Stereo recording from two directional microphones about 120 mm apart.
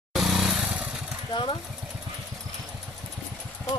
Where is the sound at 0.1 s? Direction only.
Centre (ahead or behind).